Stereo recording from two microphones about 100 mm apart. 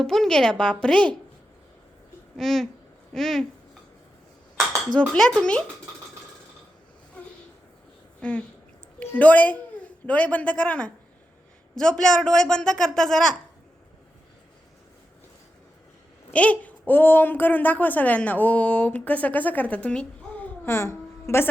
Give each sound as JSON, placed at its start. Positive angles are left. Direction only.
{"t": 0.0, "sound": "speech", "side_deg": 5}
{"t": 2.3, "sound": "speech", "side_deg": 0}
{"t": 4.9, "sound": "speech", "side_deg": 5}
{"t": 8.2, "sound": "a woman's voice", "side_deg": 10}
{"t": 16.3, "sound": "speech", "side_deg": 15}